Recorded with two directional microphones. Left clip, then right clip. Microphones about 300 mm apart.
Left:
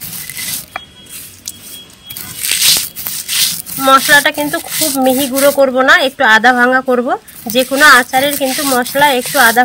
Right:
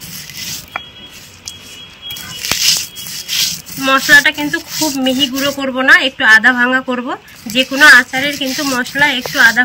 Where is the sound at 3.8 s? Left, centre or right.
Centre.